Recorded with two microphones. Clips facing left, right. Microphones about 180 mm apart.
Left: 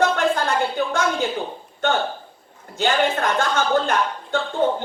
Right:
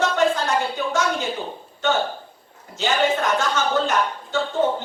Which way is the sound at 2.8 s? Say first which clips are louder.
Left 1 dB; 55° left (ahead or behind).